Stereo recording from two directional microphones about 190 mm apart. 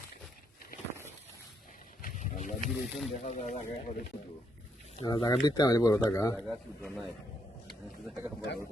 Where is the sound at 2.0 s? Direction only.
40° left (ahead or behind).